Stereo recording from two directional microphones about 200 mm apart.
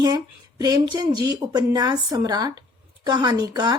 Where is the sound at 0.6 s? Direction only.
20° right (ahead or behind).